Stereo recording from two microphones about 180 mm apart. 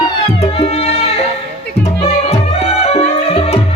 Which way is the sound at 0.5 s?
35° left (ahead or behind).